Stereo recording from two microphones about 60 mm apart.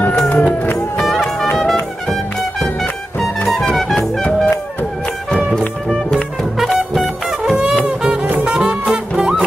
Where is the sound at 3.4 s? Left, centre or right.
Centre.